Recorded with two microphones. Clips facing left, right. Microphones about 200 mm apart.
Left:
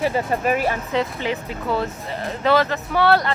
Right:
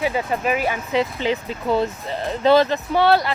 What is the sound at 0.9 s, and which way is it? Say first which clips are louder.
Speech: right 2 dB; 20° right (ahead or behind).